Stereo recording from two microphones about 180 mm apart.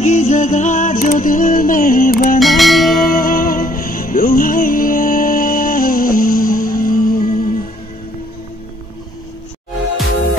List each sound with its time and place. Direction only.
0.0 s music: 40° left (ahead or behind)
2.4 s music: centre (ahead or behind)
2.9 s music: 50° left (ahead or behind)